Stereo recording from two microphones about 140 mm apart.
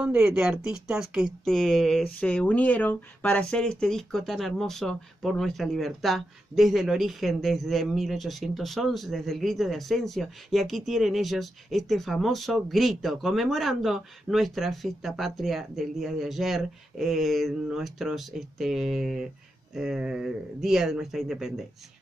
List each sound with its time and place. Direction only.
0.0 s speech: 5° right (ahead or behind)